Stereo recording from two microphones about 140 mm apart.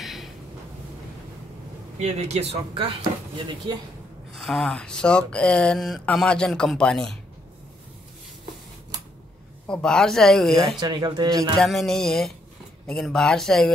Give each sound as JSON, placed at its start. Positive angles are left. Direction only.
{"t": 0.0, "sound": "a sound", "side_deg": 0}
{"t": 2.0, "sound": "speech", "side_deg": -50}
{"t": 4.4, "sound": "speech", "side_deg": 0}
{"t": 9.7, "sound": "speech", "side_deg": 5}
{"t": 10.8, "sound": "speech", "side_deg": -30}
{"t": 11.6, "sound": "speech", "side_deg": 0}